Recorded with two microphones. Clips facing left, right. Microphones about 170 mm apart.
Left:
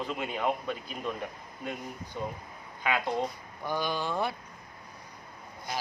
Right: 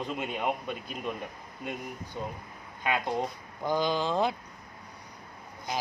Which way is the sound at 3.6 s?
20° right (ahead or behind).